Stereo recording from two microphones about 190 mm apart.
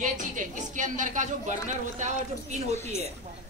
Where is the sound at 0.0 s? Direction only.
40° right (ahead or behind).